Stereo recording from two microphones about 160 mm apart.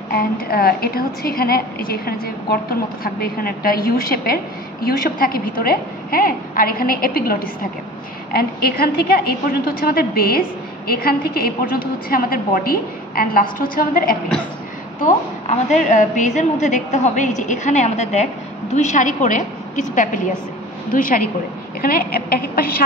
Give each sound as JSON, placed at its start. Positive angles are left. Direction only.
{"t": 0.1, "sound": "a woman's voice", "side_deg": 70}
{"t": 15.0, "sound": "a woman's voice", "side_deg": 50}